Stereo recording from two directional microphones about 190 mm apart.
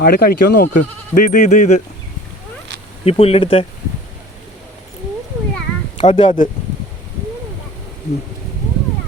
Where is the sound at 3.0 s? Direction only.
30° left (ahead or behind).